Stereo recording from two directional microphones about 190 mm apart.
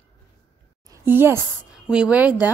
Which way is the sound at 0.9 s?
10° right (ahead or behind).